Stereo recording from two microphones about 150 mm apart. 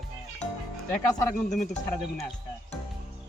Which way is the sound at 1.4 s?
55° left (ahead or behind).